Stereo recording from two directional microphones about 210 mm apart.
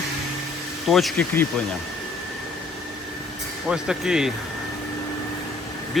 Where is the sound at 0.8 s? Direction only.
Centre (ahead or behind).